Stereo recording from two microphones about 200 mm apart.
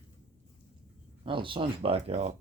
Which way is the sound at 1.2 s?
25° right (ahead or behind).